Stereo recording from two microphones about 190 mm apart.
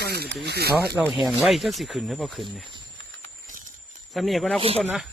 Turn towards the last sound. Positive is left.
turn(degrees=0)  # may be behind; listen again after turning